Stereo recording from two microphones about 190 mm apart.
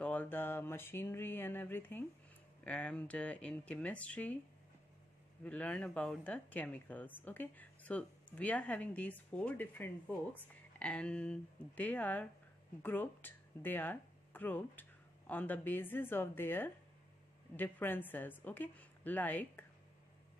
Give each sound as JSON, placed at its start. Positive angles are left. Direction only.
{"t": 0.0, "sound": "a sound", "side_deg": 10}
{"t": 2.6, "sound": "speech", "side_deg": 5}
{"t": 5.4, "sound": "speech", "side_deg": 5}